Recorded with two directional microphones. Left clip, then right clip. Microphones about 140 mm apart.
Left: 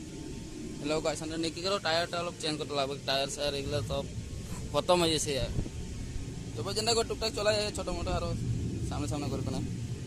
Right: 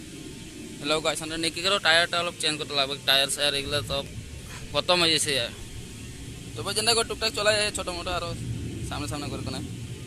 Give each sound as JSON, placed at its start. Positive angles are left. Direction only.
{"t": 0.9, "sound": "a man's voice", "side_deg": 5}
{"t": 2.7, "sound": "speech", "side_deg": 15}
{"t": 3.1, "sound": "a man's voice", "side_deg": 0}
{"t": 4.7, "sound": "speech", "side_deg": 25}
{"t": 6.6, "sound": "a man's voice", "side_deg": 0}
{"t": 9.2, "sound": "a man's voice", "side_deg": -10}